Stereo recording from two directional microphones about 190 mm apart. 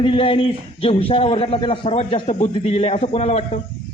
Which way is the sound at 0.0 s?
30° left (ahead or behind).